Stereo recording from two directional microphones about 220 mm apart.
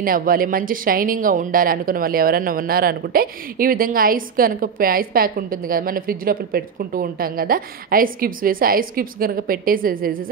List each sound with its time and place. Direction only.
0.0 s speech: 40° right (ahead or behind)